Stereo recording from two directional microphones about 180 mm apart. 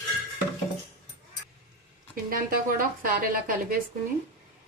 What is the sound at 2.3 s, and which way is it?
Speech, 50° right (ahead or behind).